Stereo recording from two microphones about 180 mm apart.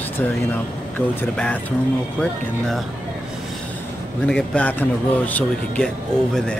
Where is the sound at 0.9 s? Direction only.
10° left (ahead or behind).